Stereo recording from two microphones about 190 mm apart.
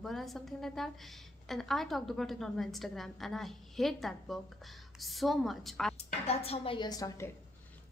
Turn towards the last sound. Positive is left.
turn(degrees=20)  # may be behind; listen again after turning